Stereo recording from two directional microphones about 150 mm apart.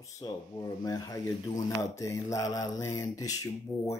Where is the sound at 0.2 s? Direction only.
25° left (ahead or behind).